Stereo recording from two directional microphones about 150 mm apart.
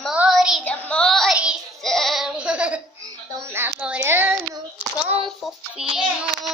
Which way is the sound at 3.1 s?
15° right (ahead or behind).